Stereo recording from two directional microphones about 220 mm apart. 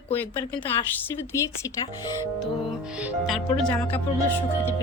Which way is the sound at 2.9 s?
5° right (ahead or behind).